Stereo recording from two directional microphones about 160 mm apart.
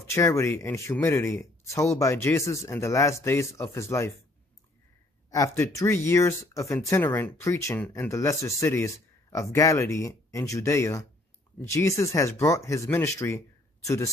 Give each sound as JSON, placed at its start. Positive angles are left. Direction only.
{"t": 0.1, "sound": "speech", "side_deg": 20}
{"t": 5.3, "sound": "speech", "side_deg": 20}